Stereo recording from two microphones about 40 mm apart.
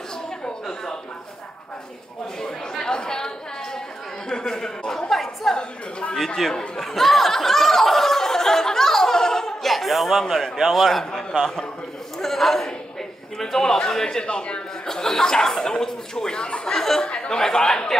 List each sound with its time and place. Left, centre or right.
2.4 s chatter: centre
4.3 s a man's voice: centre
5.1 s a woman's voice: centre
12.2 s a man's voice: centre
14.2 s a man's voice: left
14.9 s a man's voice: centre